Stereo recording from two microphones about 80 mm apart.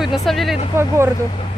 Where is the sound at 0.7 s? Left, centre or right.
Right.